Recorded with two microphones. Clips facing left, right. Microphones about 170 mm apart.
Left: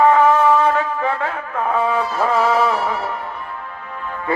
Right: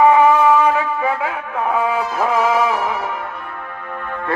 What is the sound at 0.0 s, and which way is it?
Wind instrument, 10° right (ahead or behind).